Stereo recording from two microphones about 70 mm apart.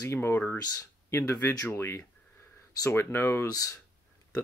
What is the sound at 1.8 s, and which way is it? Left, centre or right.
Speech, left.